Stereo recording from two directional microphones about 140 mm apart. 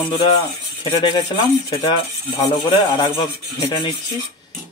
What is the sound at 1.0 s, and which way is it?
Speech, 35° left (ahead or behind).